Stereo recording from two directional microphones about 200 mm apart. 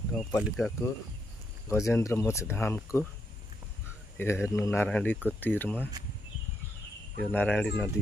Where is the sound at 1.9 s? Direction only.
15° left (ahead or behind).